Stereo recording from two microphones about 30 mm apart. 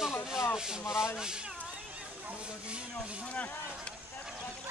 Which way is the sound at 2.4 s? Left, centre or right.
Right.